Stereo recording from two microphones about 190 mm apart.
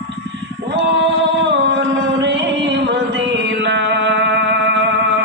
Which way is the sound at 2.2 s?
65° right (ahead or behind).